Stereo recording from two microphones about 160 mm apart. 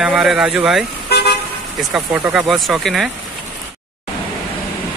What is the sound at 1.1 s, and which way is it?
Car, 90° left.